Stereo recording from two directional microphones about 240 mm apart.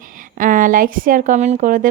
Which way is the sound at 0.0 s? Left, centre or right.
Right.